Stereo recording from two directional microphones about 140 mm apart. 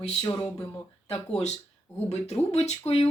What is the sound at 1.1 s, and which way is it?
Speech, 45° left (ahead or behind).